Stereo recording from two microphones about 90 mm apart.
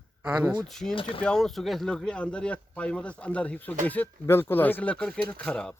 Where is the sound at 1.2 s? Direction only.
5° left (ahead or behind).